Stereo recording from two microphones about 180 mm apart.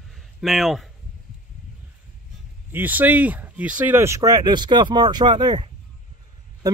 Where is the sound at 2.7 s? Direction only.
10° right (ahead or behind).